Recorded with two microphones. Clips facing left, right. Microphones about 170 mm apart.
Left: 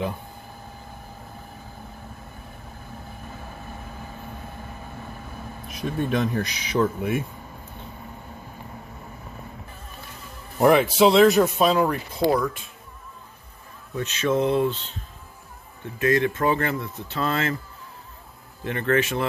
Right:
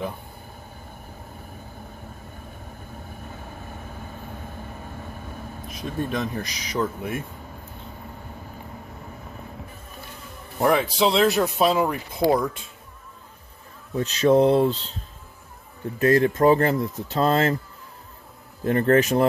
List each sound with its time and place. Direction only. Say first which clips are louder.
5.8 s speech: left 3 dB; centre (ahead or behind)
10.6 s speech: left 4 dB; 5° left (ahead or behind)
12.1 s speech: right 1 dB; 20° right (ahead or behind)
13.9 s speech: right 5 dB; 35° right (ahead or behind)
18.6 s speech: right 4 dB; 40° right (ahead or behind)